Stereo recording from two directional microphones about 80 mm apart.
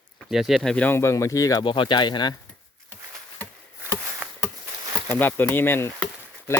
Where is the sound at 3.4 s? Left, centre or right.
Left.